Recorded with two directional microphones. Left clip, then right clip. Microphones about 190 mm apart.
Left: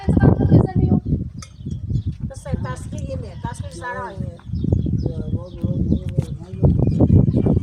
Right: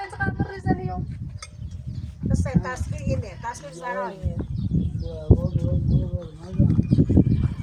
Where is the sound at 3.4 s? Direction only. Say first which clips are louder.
Left 1 dB; 5° left (ahead or behind).